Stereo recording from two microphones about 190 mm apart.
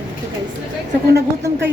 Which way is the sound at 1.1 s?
70° right (ahead or behind).